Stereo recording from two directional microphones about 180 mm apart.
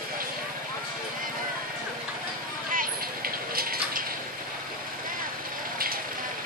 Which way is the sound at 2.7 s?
55° right (ahead or behind).